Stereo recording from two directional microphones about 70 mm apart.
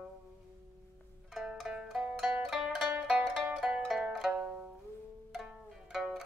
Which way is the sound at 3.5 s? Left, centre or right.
Centre.